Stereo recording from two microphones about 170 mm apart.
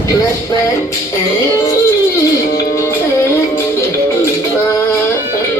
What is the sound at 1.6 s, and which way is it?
Music, 15° left (ahead or behind).